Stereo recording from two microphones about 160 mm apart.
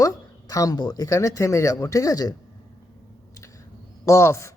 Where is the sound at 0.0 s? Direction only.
20° left (ahead or behind).